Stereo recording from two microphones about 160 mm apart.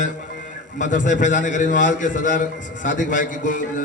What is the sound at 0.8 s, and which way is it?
A man's voice, 50° left (ahead or behind).